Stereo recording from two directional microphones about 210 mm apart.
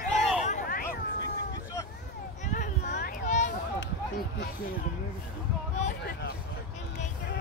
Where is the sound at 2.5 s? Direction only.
35° left (ahead or behind).